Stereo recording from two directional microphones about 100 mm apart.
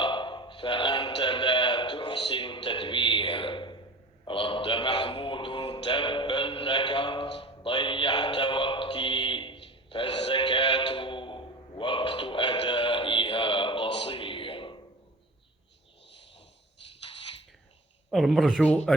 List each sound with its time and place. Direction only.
0.0 s a sound: 55° left (ahead or behind)
4.3 s mantra: 60° left (ahead or behind)
18.1 s speech: centre (ahead or behind)